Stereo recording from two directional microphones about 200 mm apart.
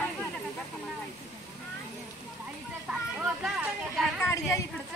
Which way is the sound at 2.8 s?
5° right (ahead or behind).